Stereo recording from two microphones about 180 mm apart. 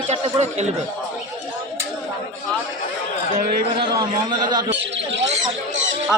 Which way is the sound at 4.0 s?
25° right (ahead or behind).